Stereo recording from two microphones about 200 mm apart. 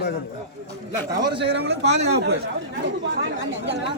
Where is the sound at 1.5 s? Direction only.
60° right (ahead or behind).